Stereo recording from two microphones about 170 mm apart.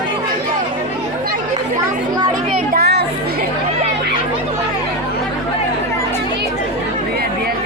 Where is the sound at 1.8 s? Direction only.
25° right (ahead or behind).